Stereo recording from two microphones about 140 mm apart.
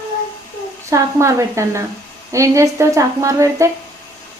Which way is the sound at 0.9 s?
20° right (ahead or behind).